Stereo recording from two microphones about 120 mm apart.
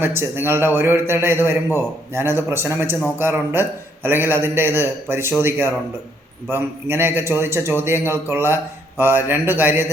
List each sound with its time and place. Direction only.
0.0 s a man's voice: 20° right (ahead or behind)